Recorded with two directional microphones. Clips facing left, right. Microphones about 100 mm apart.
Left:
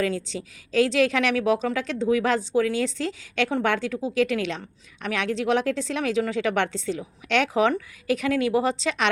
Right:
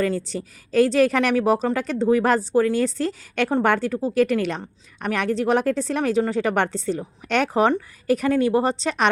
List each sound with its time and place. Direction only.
0.3 s speech: 50° right (ahead or behind)